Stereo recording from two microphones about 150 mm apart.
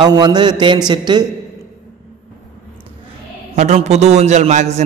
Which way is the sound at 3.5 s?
50° right (ahead or behind).